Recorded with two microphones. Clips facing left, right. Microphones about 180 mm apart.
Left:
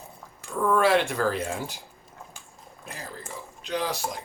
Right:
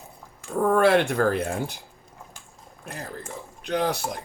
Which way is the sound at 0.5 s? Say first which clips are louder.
Right 3 dB; 50° right (ahead or behind).